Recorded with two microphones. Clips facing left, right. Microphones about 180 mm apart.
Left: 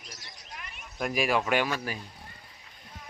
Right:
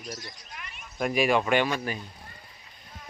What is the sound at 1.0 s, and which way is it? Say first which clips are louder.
Speech: right 3 dB; centre (ahead or behind).